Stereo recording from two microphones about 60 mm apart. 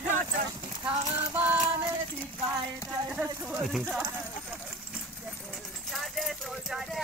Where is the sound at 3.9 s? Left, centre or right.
Right.